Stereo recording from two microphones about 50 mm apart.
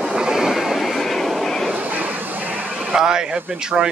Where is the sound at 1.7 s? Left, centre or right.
Right.